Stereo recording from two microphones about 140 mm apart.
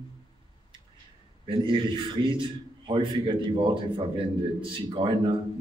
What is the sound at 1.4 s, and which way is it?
A man's voice, 35° right (ahead or behind).